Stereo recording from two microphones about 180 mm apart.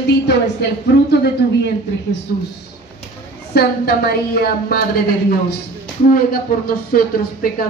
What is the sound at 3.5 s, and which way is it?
A woman's voice, 60° left (ahead or behind).